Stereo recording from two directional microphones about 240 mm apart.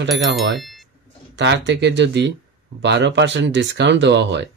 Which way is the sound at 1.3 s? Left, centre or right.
Right.